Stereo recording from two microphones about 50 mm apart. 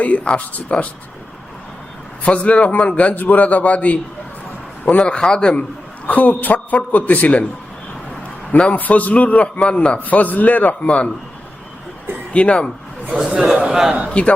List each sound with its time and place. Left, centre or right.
0.0 s speech: left
2.2 s speech: left
6.1 s a man's voice: left
8.5 s speech: left
10.0 s a man's voice: left
10.8 s speech: left
12.3 s speech: left
13.1 s a man's voice: centre
14.1 s speech: left